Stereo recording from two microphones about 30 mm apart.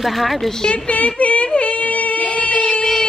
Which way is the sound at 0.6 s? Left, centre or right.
Left.